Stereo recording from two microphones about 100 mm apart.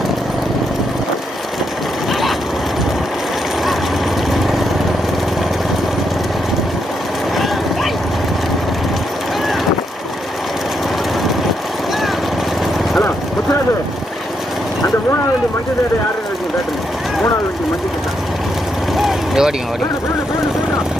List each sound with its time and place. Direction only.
4.3 s vehicle: centre (ahead or behind)
7.3 s vehicle: centre (ahead or behind)
18.9 s vehicle: centre (ahead or behind)